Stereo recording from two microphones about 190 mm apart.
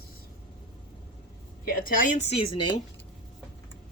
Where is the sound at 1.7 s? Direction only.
50° left (ahead or behind).